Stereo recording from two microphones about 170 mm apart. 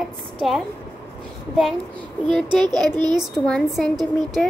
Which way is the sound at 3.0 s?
25° right (ahead or behind).